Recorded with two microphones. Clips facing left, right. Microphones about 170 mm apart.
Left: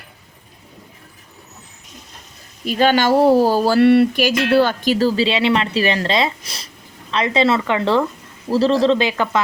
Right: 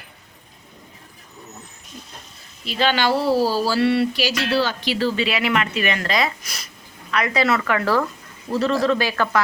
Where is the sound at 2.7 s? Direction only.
45° left (ahead or behind).